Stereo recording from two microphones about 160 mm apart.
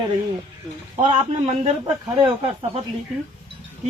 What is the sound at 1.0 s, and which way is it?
Speech, 45° right (ahead or behind).